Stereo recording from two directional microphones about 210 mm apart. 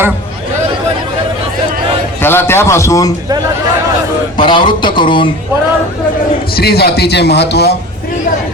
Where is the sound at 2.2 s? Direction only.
10° left (ahead or behind).